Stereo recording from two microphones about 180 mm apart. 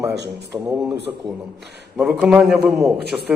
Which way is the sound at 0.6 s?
15° right (ahead or behind).